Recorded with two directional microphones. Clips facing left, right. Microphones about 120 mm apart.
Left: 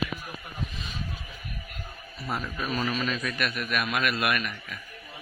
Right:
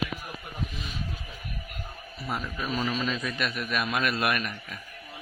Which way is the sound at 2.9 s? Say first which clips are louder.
Even; 20° right (ahead or behind).